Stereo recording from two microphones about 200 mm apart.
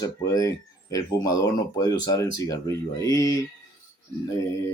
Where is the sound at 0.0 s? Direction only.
15° left (ahead or behind).